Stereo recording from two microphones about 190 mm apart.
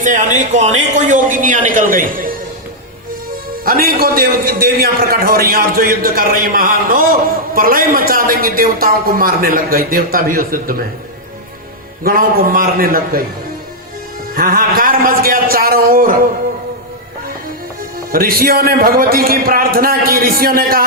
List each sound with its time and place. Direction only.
0.0 s a man's voice: 40° right (ahead or behind)
3.6 s a man's voice: 50° right (ahead or behind)
12.0 s a man's voice: 50° right (ahead or behind)
14.3 s a man's voice: 50° right (ahead or behind)
18.1 s a man's voice: 50° right (ahead or behind)